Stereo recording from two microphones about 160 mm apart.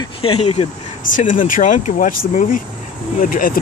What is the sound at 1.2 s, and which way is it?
Speech, 55° left (ahead or behind).